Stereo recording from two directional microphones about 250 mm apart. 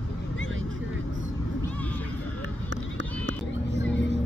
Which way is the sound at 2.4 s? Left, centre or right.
Right.